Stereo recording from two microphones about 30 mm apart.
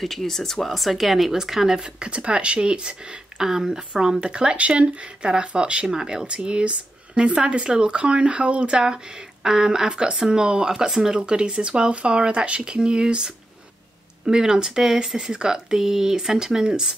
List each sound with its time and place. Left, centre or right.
0.0 s speech: centre
1.3 s speech: centre
1.8 s speech: right
3.3 s speech: centre
4.2 s speech: right
8.7 s speech: right